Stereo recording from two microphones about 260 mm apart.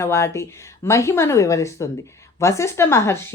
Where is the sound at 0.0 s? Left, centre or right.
Centre.